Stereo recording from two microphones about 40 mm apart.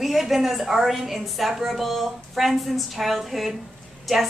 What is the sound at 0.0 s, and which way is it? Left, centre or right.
A woman's voice, centre.